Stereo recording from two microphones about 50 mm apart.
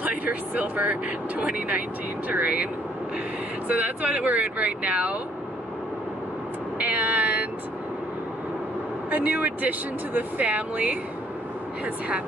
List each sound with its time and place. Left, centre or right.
0.0 s speech: right
6.8 s vehicle: right
9.1 s speech: right